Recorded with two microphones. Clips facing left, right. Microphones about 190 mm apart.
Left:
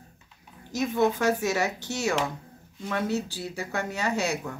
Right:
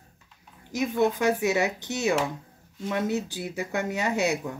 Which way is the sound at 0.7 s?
15° right (ahead or behind).